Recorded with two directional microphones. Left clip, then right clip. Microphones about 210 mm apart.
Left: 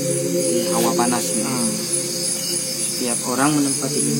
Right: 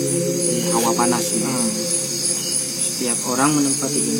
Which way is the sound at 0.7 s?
Centre (ahead or behind).